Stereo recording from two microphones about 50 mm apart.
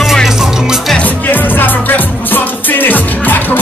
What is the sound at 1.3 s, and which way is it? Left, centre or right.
Music, left.